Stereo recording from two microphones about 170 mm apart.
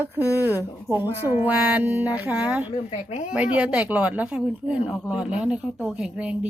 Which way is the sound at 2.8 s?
40° left (ahead or behind).